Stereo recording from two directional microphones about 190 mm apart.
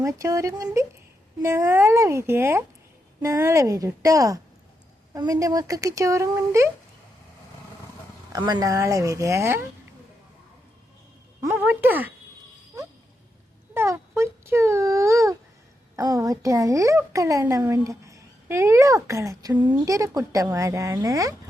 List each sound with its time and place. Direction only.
0.0 s a woman's voice: 15° right (ahead or behind)
8.3 s a woman's voice: 20° right (ahead or behind)
11.4 s a woman's voice: 10° right (ahead or behind)
13.7 s a woman's voice: 15° right (ahead or behind)